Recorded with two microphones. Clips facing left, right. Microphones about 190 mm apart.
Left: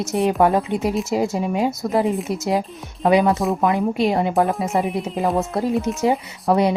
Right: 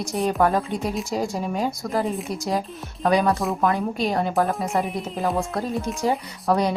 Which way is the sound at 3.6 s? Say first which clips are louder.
Left 4 dB; 20° left (ahead or behind).